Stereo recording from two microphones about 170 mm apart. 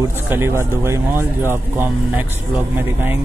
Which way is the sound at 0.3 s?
15° right (ahead or behind).